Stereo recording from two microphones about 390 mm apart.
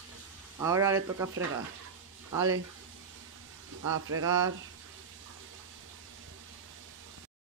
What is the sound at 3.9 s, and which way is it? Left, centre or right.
Speech, right.